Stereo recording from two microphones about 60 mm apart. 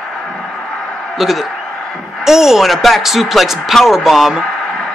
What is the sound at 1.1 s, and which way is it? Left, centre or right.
A man's voice, centre.